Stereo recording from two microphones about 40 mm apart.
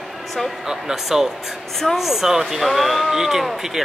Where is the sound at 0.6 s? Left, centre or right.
Centre.